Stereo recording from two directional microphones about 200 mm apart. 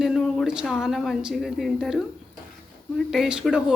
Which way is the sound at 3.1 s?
5° right (ahead or behind).